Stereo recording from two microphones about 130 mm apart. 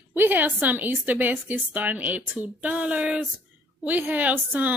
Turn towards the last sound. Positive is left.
turn(degrees=-15)  # may be behind; listen again after turning